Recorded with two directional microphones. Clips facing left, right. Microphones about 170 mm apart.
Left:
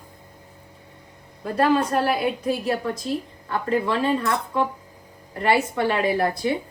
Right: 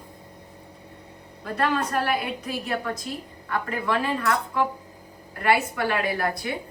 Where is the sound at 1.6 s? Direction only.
30° left (ahead or behind).